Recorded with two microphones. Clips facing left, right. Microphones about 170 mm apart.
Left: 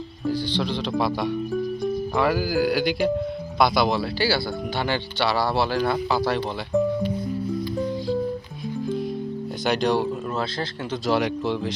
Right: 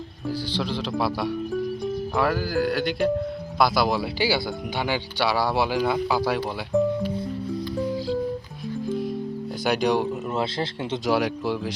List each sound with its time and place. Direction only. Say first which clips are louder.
0.3 s speech: left 3 dB; 5° right (ahead or behind)
9.6 s speech: even; 10° right (ahead or behind)
10.3 s speech: right 1 dB; 25° right (ahead or behind)
11.1 s speech: left 1 dB; 10° right (ahead or behind)